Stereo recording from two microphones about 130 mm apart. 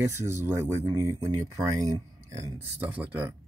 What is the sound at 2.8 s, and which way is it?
Speech, 10° right (ahead or behind).